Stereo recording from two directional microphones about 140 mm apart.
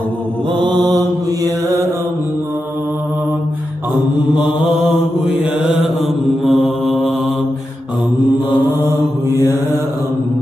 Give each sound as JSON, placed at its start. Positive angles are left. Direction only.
{"t": 0.6, "sound": "mantra", "side_deg": -35}
{"t": 6.4, "sound": "mantra", "side_deg": 0}